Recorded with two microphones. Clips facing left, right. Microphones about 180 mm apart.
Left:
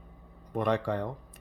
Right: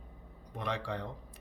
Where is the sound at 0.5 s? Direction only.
50° left (ahead or behind).